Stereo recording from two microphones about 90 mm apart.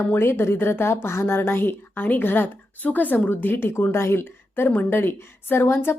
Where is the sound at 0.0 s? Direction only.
25° left (ahead or behind).